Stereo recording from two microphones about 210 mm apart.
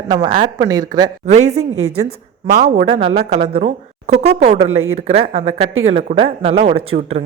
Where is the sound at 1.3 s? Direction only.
30° right (ahead or behind).